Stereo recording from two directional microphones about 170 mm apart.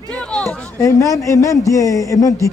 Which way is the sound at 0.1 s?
5° left (ahead or behind).